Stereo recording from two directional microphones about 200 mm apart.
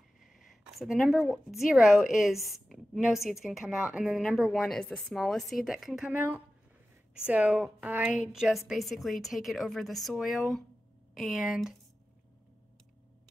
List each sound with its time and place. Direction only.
0.2 s a woman's voice: centre (ahead or behind)